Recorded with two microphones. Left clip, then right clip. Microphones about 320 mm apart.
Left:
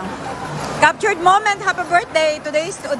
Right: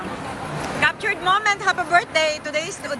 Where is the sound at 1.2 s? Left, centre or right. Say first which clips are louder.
Left 4 dB; centre.